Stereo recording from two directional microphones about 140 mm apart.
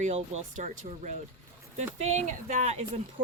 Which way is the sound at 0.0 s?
55° right (ahead or behind).